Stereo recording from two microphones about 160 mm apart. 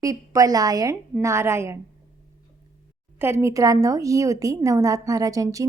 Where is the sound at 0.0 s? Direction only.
20° right (ahead or behind).